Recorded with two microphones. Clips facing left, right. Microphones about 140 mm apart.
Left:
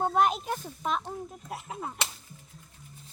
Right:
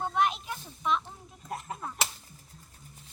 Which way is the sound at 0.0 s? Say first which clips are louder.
Left 3 dB; 45° left (ahead or behind).